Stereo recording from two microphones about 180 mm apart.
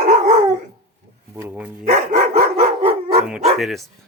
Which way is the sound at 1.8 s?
45° right (ahead or behind).